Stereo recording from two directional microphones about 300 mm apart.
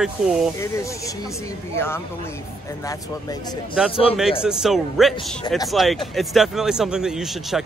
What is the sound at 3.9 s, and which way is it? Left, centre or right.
Speech, centre.